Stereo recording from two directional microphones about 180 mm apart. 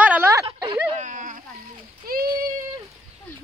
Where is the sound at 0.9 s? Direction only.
45° right (ahead or behind).